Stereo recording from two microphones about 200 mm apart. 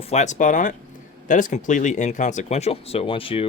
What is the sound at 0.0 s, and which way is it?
Speech, 35° left (ahead or behind).